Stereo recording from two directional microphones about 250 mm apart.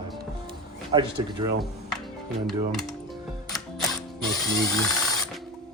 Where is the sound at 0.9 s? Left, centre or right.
Centre.